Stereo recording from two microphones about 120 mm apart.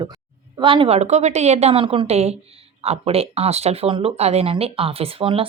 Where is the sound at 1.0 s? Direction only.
70° right (ahead or behind); by 2.1 s 45° right (ahead or behind).